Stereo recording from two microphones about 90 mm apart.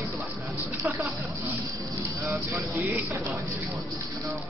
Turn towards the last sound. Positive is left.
turn(degrees=-20)  # may be behind; listen again after turning